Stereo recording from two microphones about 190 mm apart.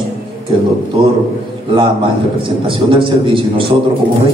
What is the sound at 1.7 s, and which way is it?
A man's voice, 25° right (ahead or behind).